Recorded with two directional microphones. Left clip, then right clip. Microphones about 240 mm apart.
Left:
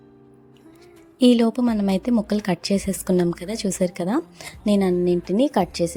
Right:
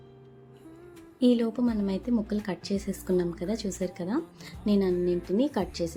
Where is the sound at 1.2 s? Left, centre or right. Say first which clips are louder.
Left 7 dB; left.